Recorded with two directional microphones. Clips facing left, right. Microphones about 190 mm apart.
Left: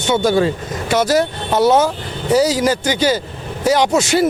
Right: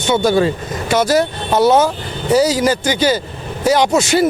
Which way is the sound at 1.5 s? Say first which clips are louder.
Right 1 dB; 45° right (ahead or behind).